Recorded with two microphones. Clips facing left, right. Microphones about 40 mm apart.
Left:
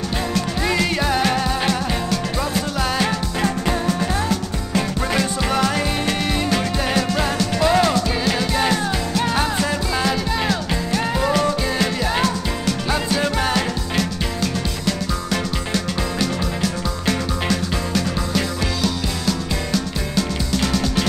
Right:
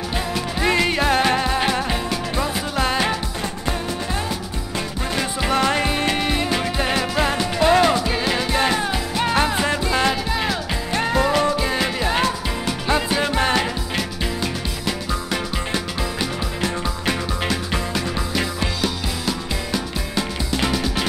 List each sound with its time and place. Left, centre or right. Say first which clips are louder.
0.3 s music: right 2 dB; centre
5.4 s music: right 1 dB; centre
10.3 s music: left 2 dB; centre
10.9 s music: right 3 dB; right
11.2 s music: even; centre